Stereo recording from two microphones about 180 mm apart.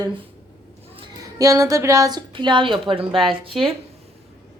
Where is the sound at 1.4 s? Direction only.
20° right (ahead or behind).